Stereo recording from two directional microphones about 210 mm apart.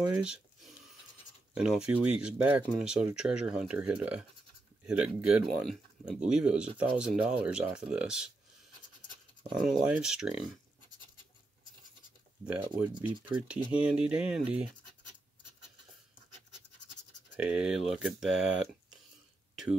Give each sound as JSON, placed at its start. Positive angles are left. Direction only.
{"t": 0.1, "sound": "a sound", "side_deg": -5}
{"t": 1.5, "sound": "speech", "side_deg": -5}
{"t": 9.5, "sound": "speech", "side_deg": 0}
{"t": 12.4, "sound": "speech", "side_deg": -10}
{"t": 17.4, "sound": "speech", "side_deg": -5}
{"t": 19.5, "sound": "throat clearing", "side_deg": 0}